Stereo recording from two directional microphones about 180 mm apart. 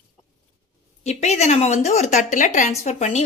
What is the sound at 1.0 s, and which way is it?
Speech, 35° left (ahead or behind).